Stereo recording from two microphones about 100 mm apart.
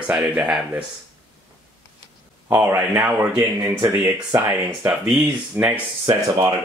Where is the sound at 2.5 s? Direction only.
20° right (ahead or behind).